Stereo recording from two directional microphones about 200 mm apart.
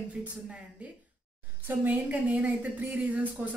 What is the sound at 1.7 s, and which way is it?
A woman's voice, 10° right (ahead or behind).